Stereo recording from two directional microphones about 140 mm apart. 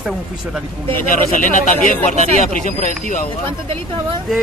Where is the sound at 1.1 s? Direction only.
70° left (ahead or behind).